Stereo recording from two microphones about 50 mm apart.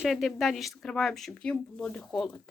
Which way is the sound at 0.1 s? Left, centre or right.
Centre.